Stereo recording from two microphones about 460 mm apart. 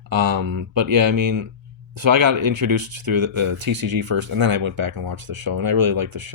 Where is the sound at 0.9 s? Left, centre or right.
Right.